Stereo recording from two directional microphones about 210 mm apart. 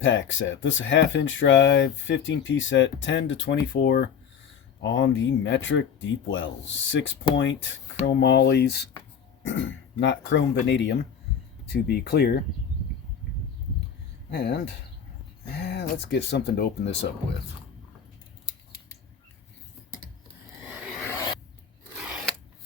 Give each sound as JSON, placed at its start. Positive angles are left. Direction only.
{"t": 0.0, "sound": "speech", "side_deg": 65}
{"t": 4.8, "sound": "speech", "side_deg": 60}
{"t": 9.5, "sound": "speech", "side_deg": 65}
{"t": 14.3, "sound": "speech", "side_deg": 50}
{"t": 21.1, "sound": "filing", "side_deg": 15}